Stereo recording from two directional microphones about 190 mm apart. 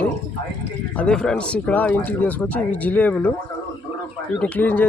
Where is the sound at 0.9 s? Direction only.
5° left (ahead or behind).